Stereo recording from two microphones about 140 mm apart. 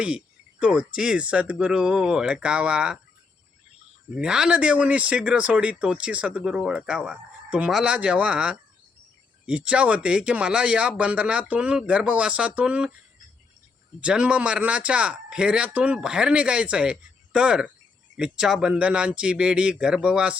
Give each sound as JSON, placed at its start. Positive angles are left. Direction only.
{"t": 0.6, "sound": "speech", "side_deg": -5}
{"t": 4.1, "sound": "speech", "side_deg": -5}
{"t": 14.0, "sound": "speech", "side_deg": -5}